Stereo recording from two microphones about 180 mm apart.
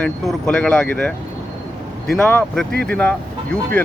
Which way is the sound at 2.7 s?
60° right (ahead or behind).